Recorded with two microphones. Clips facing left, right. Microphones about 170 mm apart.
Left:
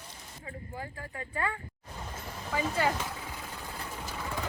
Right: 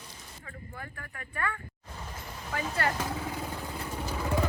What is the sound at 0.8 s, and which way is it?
Speech, 20° left (ahead or behind).